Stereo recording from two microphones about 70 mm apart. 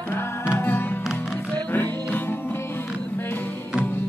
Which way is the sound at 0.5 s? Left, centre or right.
Left.